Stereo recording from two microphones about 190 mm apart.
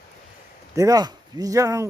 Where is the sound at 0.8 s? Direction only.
20° right (ahead or behind).